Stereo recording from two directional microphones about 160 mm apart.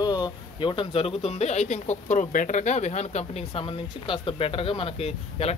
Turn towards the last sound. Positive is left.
turn(degrees=40)  # may be behind; listen again after turning